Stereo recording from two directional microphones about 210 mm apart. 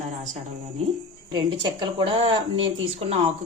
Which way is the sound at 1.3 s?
20° right (ahead or behind).